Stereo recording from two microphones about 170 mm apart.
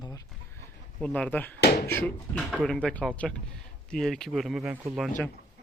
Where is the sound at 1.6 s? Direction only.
70° left (ahead or behind).